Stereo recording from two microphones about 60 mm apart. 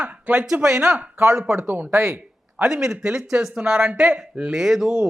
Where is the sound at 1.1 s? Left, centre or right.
Right.